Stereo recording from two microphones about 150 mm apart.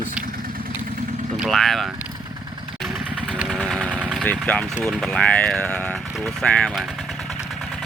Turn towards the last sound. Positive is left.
turn(degrees=5)  # may be behind; listen again after turning